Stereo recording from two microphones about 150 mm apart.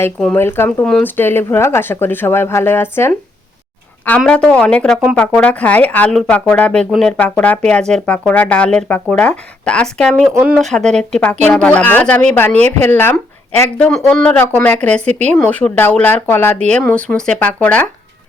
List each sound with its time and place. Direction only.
0.3 s speech: 15° left (ahead or behind)
0.9 s speech: 5° left (ahead or behind)
1.1 s speech: 15° left (ahead or behind)
4.2 s speech: 5° left (ahead or behind)
10.3 s speech: 10° right (ahead or behind)
10.6 s speech: 5° left (ahead or behind)
15.0 s speech: 50° right (ahead or behind)
15.4 s speech: 10° left (ahead or behind)